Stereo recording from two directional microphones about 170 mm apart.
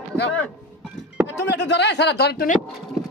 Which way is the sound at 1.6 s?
85° left.